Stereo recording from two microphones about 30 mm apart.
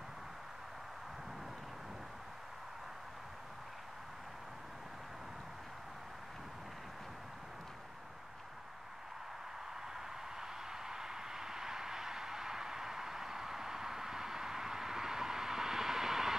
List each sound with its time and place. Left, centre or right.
9.9 s vehicle: centre